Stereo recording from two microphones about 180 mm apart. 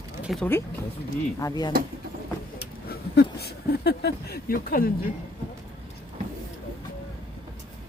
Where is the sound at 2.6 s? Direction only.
60° left (ahead or behind).